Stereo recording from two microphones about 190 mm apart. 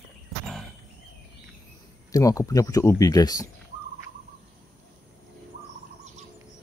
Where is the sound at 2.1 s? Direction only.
20° left (ahead or behind).